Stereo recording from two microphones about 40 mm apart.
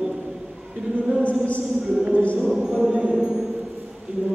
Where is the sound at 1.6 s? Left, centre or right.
Centre.